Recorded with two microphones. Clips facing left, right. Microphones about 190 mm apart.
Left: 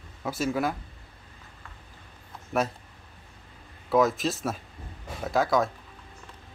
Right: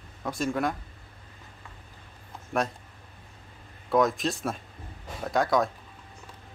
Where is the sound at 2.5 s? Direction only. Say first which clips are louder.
Left 1 dB; centre (ahead or behind).